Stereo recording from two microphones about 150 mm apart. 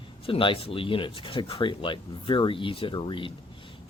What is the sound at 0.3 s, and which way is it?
Speech, 35° left (ahead or behind).